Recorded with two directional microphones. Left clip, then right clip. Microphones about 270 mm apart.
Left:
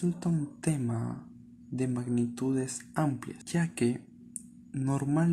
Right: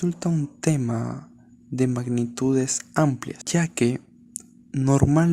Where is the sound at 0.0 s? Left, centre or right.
Right.